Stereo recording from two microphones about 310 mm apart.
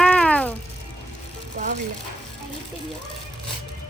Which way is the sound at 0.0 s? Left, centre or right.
Centre.